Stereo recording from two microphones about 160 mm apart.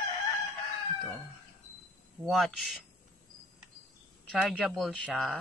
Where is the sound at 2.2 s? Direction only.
Centre (ahead or behind).